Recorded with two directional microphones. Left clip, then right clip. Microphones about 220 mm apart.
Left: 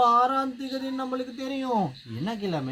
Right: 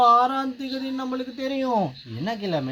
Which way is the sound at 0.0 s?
20° right (ahead or behind).